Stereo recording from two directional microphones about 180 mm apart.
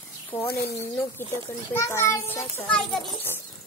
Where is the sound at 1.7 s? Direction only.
15° left (ahead or behind).